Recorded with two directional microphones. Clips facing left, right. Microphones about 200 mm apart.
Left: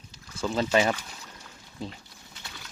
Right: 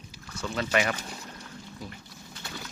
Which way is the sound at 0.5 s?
30° left (ahead or behind).